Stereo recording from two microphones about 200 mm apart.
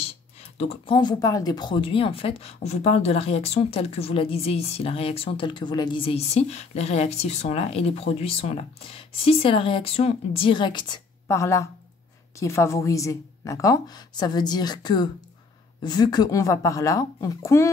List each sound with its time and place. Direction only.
0.6 s a woman's voice: 25° left (ahead or behind)